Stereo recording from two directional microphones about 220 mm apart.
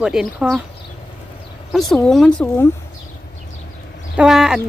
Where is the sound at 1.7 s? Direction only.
Centre (ahead or behind).